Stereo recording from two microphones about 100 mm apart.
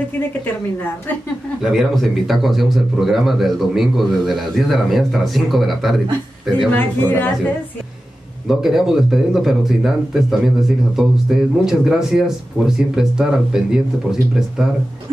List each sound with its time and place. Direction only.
1.6 s speech: centre (ahead or behind)
6.7 s speech: 20° left (ahead or behind)
8.5 s speech: 5° right (ahead or behind)